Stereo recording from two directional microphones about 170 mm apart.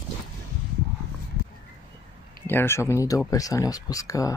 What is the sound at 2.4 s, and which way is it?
Speech, 15° left (ahead or behind).